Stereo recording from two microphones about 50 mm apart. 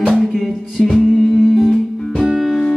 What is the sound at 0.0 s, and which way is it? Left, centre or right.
Music, centre.